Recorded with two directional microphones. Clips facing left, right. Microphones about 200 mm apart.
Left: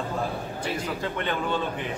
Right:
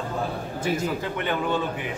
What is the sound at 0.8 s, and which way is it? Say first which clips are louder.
Speech: right 2 dB; 10° right (ahead or behind).